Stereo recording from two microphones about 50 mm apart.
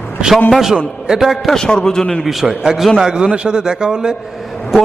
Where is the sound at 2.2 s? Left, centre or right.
Centre.